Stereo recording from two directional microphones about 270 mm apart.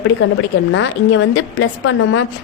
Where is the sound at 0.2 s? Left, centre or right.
Left.